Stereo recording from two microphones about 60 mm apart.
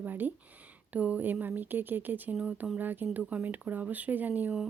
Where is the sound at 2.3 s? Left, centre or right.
Centre.